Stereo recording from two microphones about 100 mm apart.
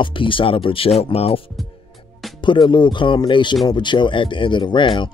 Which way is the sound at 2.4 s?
50° left (ahead or behind).